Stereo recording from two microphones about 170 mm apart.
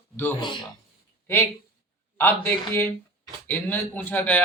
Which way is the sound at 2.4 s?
10° left (ahead or behind).